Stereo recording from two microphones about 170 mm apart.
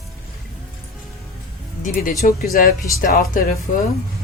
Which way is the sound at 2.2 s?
50° left (ahead or behind).